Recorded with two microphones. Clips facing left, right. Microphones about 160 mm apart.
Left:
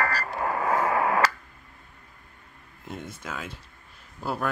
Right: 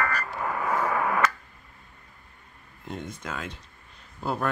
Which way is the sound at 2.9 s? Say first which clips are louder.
Right 1 dB; 5° left (ahead or behind).